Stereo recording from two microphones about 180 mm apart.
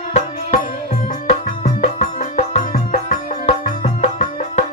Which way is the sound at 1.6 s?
45° left (ahead or behind).